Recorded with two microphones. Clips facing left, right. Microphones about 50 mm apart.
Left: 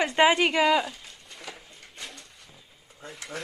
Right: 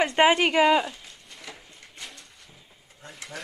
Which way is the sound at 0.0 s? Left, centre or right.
Centre.